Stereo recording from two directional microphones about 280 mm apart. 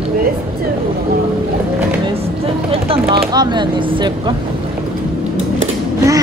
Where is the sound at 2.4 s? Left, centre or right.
Centre.